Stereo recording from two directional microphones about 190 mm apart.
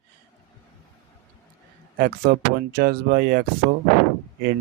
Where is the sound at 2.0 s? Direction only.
50° right (ahead or behind).